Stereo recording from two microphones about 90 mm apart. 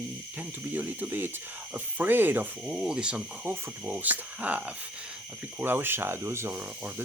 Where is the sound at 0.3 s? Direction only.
20° right (ahead or behind).